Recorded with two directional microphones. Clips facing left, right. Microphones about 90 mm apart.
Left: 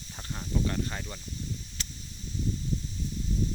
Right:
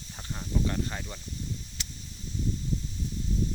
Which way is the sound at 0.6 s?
5° right (ahead or behind).